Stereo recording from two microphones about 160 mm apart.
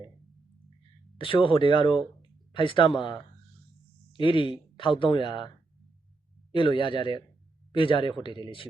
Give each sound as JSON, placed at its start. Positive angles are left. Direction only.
{"t": 1.2, "sound": "speech", "side_deg": 30}
{"t": 6.5, "sound": "speech", "side_deg": 30}